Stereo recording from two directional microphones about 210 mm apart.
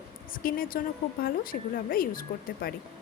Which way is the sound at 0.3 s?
45° left (ahead or behind).